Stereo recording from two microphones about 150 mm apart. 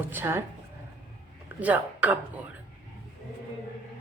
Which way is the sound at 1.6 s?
10° right (ahead or behind).